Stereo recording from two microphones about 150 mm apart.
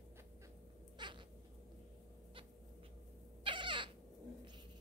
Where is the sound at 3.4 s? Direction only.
35° right (ahead or behind).